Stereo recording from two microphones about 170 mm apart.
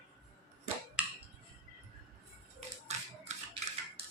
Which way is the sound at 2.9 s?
40° right (ahead or behind).